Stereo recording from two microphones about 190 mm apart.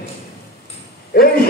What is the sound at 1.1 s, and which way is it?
Speech, 55° left (ahead or behind).